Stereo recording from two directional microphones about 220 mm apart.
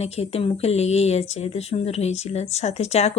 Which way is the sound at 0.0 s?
30° left (ahead or behind).